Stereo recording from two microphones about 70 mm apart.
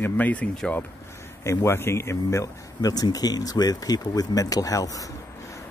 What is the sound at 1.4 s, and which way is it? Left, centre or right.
Speech, left.